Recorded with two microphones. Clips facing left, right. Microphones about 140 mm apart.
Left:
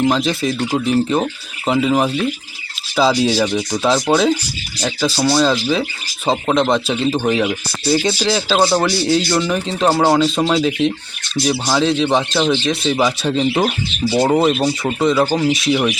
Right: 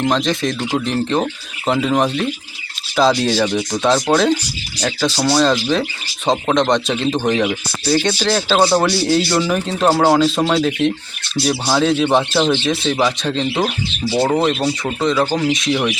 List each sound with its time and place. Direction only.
0.0 s speech: 5° left (ahead or behind)